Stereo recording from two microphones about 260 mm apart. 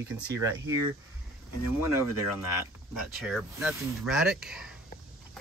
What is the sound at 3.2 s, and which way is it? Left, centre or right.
Speech, centre.